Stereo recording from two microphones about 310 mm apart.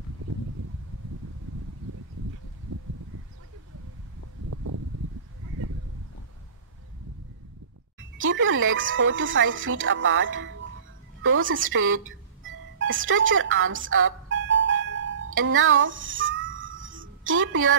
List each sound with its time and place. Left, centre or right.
4.5 s a sound: right
8.2 s speech: right
11.2 s music: right